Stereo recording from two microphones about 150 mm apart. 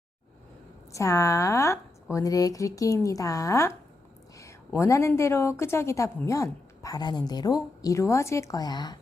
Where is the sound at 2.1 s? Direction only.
25° left (ahead or behind).